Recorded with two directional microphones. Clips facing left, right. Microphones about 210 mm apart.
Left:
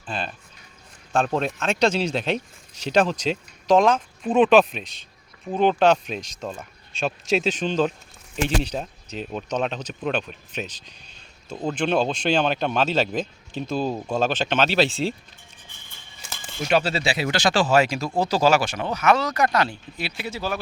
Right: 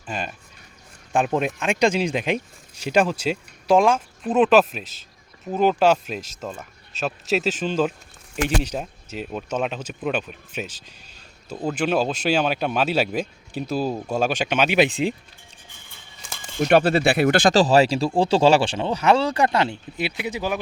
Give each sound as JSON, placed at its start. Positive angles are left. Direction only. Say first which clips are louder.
{"t": 0.0, "sound": "speech", "louder": "even", "side_deg": -10}
{"t": 16.6, "sound": "speech", "louder": "right 5 dB", "side_deg": -55}
{"t": 17.6, "sound": "speech", "louder": "right 3 dB", "side_deg": -35}